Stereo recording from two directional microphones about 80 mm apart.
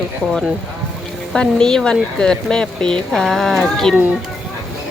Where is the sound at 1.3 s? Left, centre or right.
Centre.